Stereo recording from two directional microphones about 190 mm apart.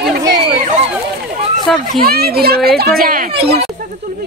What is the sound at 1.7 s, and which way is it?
Speech, centre (ahead or behind).